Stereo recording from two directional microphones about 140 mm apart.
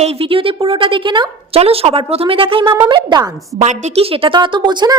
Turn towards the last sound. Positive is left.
turn(degrees=-30)  # may be behind; listen again after turning